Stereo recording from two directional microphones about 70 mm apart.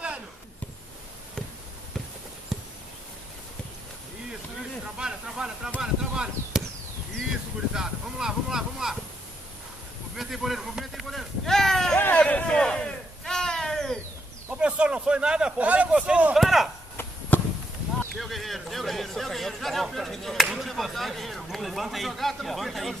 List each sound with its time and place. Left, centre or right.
2.5 s a sound: centre
4.9 s snake: centre
5.8 s chop: centre
7.7 s speech: centre
10.1 s a sound: centre
12.2 s a sound: centre
14.6 s speech: centre
16.3 s speech: centre
17.3 s chop: left
18.1 s speech: centre